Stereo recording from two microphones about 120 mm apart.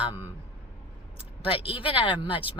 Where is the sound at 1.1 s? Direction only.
50° left (ahead or behind).